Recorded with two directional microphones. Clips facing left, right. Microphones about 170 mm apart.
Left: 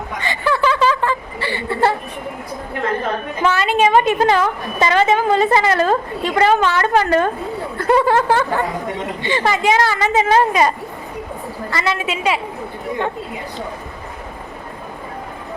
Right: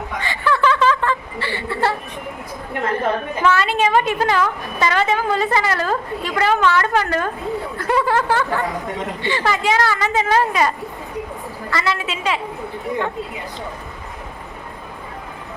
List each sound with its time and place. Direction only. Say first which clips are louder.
0.2 s chuckle: left 1 dB; 15° left (ahead or behind)
3.4 s a woman's voice: left 2 dB; 20° left (ahead or behind)
11.7 s a woman's voice: left 1 dB; 20° left (ahead or behind)